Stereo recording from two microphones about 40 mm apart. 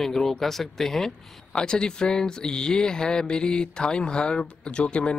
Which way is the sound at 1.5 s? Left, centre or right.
Left.